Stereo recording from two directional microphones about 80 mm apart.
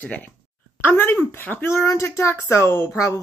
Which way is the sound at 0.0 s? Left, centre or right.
Centre.